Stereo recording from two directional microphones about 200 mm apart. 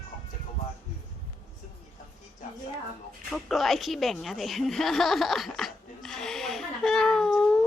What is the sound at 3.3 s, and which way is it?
A woman's voice, centre (ahead or behind).